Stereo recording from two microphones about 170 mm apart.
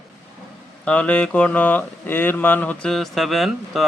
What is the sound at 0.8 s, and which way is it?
Speech, 5° left (ahead or behind).